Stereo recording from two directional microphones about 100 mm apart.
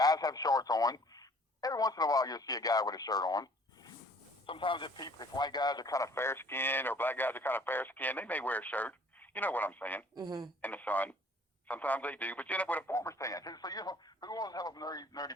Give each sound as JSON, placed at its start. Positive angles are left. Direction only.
{"t": 0.0, "sound": "speech", "side_deg": 40}
{"t": 4.4, "sound": "a man's voice", "side_deg": 60}
{"t": 10.2, "sound": "speech", "side_deg": -45}
{"t": 10.6, "sound": "speech", "side_deg": 15}
{"t": 12.9, "sound": "speech", "side_deg": 30}